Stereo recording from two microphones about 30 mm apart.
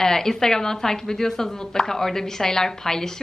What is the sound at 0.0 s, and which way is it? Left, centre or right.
A woman's voice, centre.